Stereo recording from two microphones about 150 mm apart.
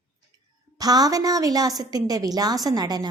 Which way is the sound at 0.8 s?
25° right (ahead or behind).